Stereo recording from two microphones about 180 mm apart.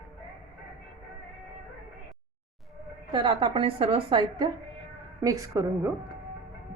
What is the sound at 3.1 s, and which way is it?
A woman's voice, 30° right (ahead or behind).